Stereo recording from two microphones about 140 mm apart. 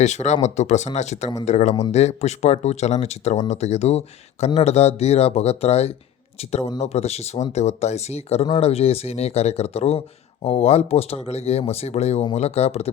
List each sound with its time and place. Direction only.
0.0 s speech: 55° left (ahead or behind)